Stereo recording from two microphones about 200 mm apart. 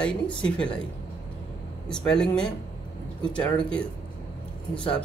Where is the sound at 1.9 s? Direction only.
5° left (ahead or behind).